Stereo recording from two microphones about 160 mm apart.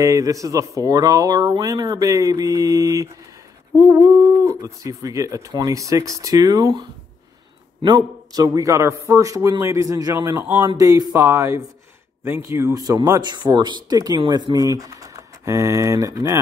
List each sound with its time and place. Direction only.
0.0 s speech: 20° right (ahead or behind)